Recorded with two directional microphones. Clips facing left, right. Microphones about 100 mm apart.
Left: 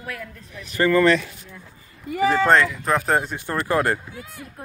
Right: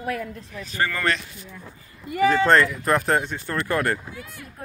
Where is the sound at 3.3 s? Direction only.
20° left (ahead or behind).